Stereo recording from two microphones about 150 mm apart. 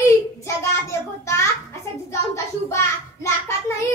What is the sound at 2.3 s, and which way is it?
Child singing, 20° left (ahead or behind).